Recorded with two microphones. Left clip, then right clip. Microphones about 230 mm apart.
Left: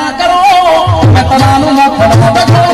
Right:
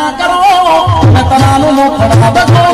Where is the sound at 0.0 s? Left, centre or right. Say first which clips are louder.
Left 1 dB; left.